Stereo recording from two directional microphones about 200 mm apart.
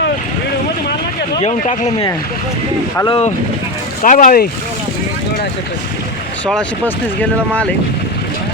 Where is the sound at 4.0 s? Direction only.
40° left (ahead or behind).